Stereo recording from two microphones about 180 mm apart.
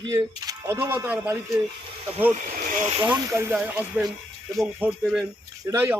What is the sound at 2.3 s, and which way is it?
Speech, 40° right (ahead or behind).